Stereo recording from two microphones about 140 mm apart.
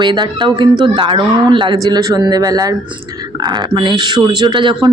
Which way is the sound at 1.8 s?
25° right (ahead or behind).